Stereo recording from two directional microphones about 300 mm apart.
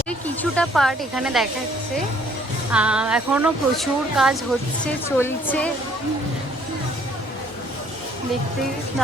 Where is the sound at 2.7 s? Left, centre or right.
Centre.